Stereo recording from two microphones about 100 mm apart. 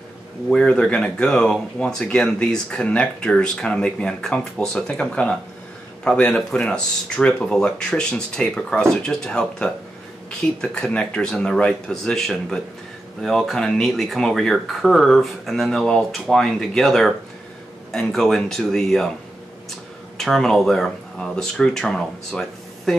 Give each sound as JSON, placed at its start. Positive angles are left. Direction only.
{"t": 0.5, "sound": "speech", "side_deg": 10}
{"t": 20.2, "sound": "speech", "side_deg": 5}